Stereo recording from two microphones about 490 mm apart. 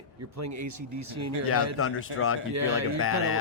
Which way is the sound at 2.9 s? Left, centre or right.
Left.